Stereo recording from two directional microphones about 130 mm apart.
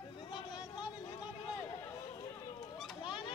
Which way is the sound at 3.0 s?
40° left (ahead or behind).